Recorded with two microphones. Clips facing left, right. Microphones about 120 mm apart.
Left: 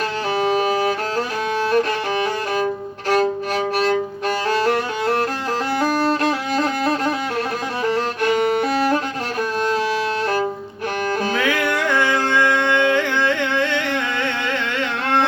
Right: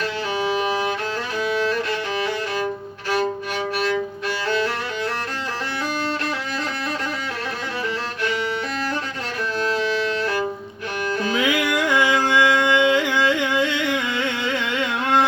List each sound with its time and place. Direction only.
0.3 s music: 40° left (ahead or behind)
1.7 s music: 45° left (ahead or behind)
4.4 s music: 40° left (ahead or behind)
6.5 s music: 40° left (ahead or behind)
7.9 s violin: 50° left (ahead or behind)
11.2 s music: 40° left (ahead or behind)
11.7 s music: 15° right (ahead or behind)
14.3 s carnatic music: 15° right (ahead or behind)